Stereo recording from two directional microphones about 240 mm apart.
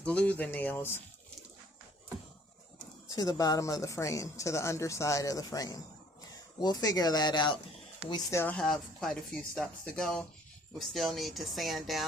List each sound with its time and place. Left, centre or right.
0.0 s speech: centre
3.1 s speech: centre